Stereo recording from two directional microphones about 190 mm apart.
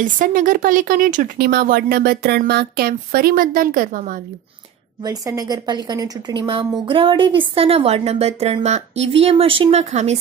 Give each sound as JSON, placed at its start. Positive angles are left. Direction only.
{"t": 0.0, "sound": "a woman's voice", "side_deg": -45}
{"t": 5.0, "sound": "a woman's voice", "side_deg": -20}